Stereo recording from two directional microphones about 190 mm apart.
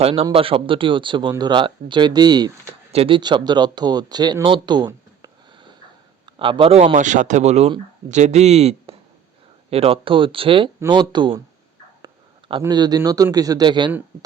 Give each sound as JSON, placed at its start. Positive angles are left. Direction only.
{"t": 0.0, "sound": "a man's voice", "side_deg": -30}